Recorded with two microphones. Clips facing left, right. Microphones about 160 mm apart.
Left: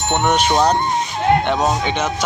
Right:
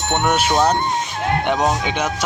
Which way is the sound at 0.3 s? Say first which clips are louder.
Left 1 dB; 5° right (ahead or behind).